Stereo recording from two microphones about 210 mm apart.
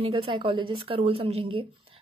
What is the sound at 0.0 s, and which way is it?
A woman's voice, 25° right (ahead or behind).